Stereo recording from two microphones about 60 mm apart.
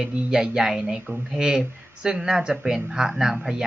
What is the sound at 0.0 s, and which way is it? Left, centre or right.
Speech, centre.